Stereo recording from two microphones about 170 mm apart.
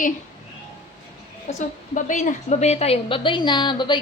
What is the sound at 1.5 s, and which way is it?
A woman's voice, 40° left (ahead or behind).